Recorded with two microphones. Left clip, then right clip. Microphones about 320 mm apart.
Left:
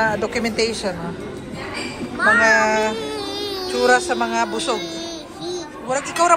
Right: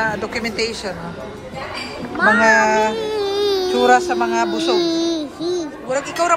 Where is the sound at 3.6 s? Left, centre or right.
Centre.